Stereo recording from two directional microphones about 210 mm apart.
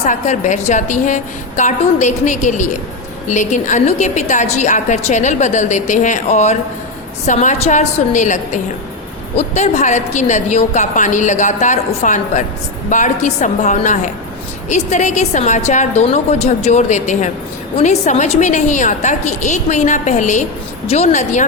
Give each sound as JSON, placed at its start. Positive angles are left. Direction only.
{"t": 0.0, "sound": "a woman's voice", "side_deg": 35}
{"t": 9.6, "sound": "a woman's voice", "side_deg": 35}